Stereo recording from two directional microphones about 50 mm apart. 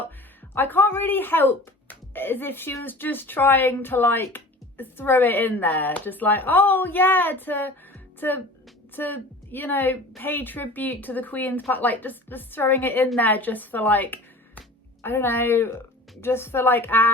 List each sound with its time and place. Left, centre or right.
0.5 s a woman's voice: left
15.0 s a woman's voice: left